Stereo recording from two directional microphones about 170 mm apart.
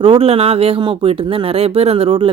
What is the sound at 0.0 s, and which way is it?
Speech, 35° right (ahead or behind).